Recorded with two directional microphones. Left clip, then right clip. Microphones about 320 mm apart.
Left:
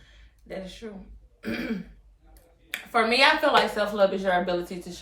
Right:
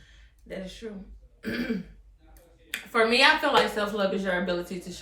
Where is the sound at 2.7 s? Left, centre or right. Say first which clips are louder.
Even; centre.